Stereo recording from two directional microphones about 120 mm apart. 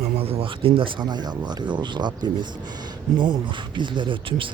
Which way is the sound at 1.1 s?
35° right (ahead or behind).